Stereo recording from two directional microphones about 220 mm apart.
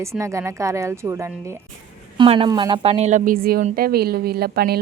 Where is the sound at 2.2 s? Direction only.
20° right (ahead or behind).